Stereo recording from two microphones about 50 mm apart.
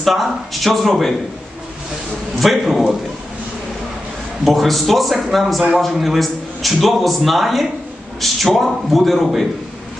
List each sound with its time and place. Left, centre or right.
0.0 s a man's voice: centre
2.4 s a man's voice: centre
4.5 s a man's voice: centre